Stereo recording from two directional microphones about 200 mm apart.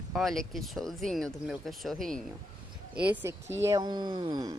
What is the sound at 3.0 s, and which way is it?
Speech, 10° right (ahead or behind).